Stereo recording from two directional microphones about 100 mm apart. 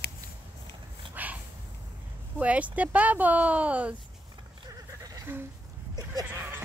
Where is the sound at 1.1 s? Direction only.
15° right (ahead or behind).